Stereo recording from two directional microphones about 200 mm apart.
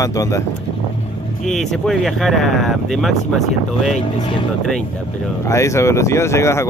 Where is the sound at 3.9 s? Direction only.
25° left (ahead or behind).